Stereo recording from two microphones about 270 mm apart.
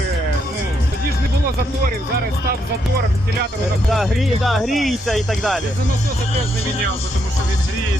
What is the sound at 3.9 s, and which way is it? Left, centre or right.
Speech, centre.